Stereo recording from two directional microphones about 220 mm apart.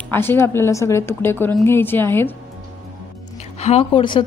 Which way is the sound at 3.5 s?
30° left (ahead or behind).